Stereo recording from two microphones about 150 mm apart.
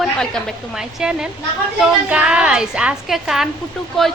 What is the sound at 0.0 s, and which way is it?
A woman's voice, 5° left (ahead or behind).